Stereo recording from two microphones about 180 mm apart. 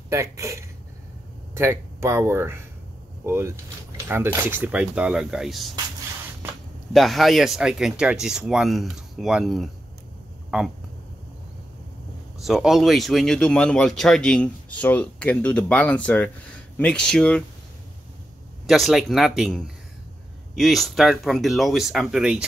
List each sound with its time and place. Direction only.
0.1 s speech: 15° right (ahead or behind); by 5.7 s centre (ahead or behind)
6.9 s speech: centre (ahead or behind)
12.4 s speech: centre (ahead or behind)
18.7 s speech: centre (ahead or behind)